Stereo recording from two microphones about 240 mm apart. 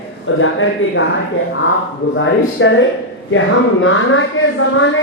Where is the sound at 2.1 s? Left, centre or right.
Left.